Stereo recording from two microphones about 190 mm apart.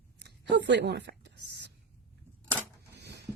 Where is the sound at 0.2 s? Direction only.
65° right (ahead or behind).